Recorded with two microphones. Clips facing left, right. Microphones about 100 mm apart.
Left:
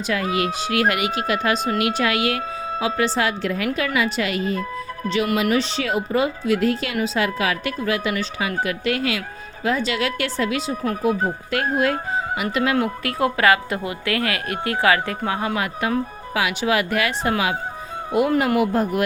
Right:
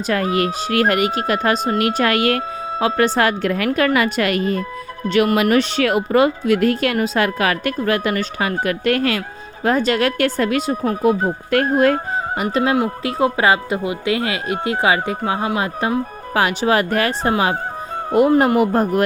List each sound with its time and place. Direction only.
0.1 s speech: 45° right (ahead or behind)
12.4 s speech: 35° right (ahead or behind)
12.7 s speech: 20° right (ahead or behind)
16.3 s speech: 45° right (ahead or behind)